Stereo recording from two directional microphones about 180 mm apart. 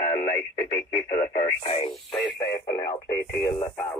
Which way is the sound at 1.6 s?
35° left (ahead or behind).